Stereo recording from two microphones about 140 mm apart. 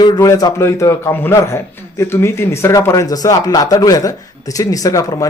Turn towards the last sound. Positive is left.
turn(degrees=25)  # may be behind; listen again after turning